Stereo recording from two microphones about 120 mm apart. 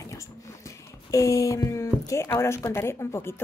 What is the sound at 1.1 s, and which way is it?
Speech, 25° left (ahead or behind).